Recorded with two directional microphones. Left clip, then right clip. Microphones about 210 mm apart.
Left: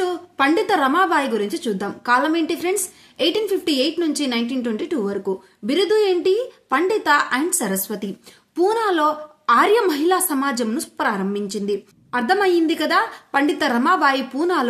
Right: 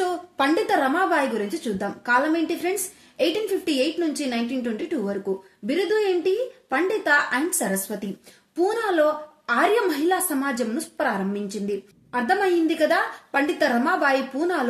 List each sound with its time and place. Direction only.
0.0 s a woman's voice: 15° left (ahead or behind)